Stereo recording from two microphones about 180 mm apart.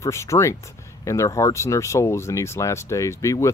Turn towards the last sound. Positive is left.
turn(degrees=15)  # may be behind; listen again after turning